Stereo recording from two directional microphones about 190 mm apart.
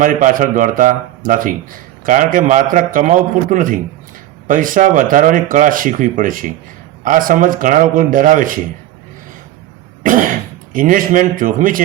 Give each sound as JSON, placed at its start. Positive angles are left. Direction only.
{"t": 0.0, "sound": "speech", "side_deg": -45}
{"t": 10.0, "sound": "cough", "side_deg": -45}
{"t": 10.7, "sound": "speech", "side_deg": -45}